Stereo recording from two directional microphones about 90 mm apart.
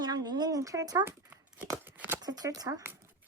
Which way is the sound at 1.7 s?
20° right (ahead or behind).